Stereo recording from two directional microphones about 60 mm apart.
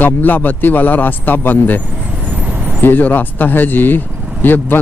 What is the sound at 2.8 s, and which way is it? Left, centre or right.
Speech, left.